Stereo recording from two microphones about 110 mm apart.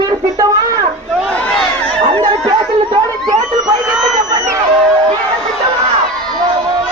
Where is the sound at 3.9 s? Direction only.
Centre (ahead or behind).